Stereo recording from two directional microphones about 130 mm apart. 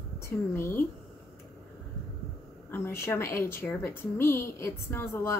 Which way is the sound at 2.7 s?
20° left (ahead or behind).